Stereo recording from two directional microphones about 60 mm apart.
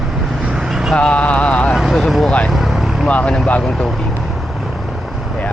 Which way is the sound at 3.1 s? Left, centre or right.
Left.